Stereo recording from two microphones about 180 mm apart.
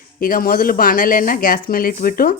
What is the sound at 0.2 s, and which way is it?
Speech, 55° left (ahead or behind).